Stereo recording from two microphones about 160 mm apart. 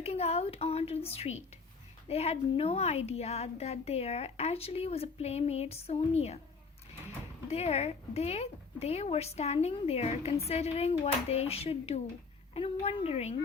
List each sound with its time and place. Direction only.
0.0 s a sound: 40° left (ahead or behind)
2.0 s a woman's voice: 40° left (ahead or behind)
7.5 s a woman's voice: 40° left (ahead or behind)